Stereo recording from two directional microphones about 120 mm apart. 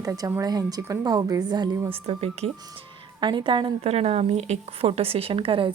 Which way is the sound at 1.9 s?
55° right (ahead or behind).